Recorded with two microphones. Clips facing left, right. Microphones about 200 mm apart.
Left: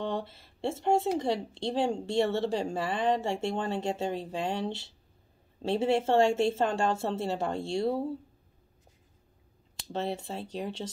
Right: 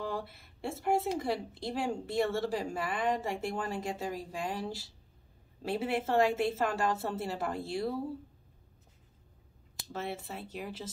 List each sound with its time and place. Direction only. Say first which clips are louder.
0.0 s speech: left 4 dB; 25° left (ahead or behind)
9.9 s speech: left 5 dB; 30° left (ahead or behind)